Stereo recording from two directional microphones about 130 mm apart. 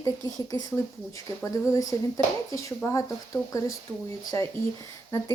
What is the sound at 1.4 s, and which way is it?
Speech, 25° left (ahead or behind).